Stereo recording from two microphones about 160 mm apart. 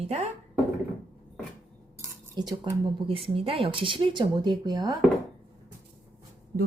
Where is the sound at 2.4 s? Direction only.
30° right (ahead or behind).